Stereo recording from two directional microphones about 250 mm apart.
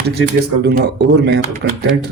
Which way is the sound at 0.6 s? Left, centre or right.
Right.